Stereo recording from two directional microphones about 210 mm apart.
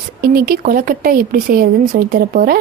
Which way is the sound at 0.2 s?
45° right (ahead or behind).